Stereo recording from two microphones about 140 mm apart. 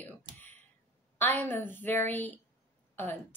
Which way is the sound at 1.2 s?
15° left (ahead or behind).